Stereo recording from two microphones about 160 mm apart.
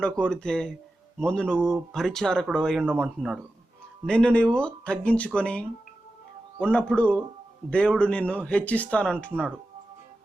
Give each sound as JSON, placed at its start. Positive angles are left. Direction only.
{"t": 0.0, "sound": "speech", "side_deg": 5}